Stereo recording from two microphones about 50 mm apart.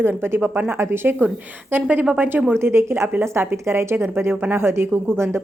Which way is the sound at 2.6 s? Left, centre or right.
Right.